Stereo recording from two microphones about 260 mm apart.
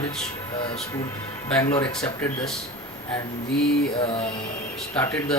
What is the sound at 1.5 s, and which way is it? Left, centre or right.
Speech, centre.